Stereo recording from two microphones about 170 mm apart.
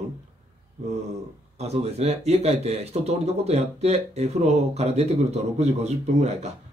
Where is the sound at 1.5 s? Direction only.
40° right (ahead or behind).